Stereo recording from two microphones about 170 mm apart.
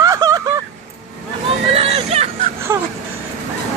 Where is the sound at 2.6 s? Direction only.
15° right (ahead or behind).